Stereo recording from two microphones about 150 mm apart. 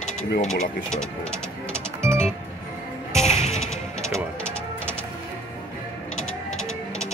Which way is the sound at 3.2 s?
50° left (ahead or behind).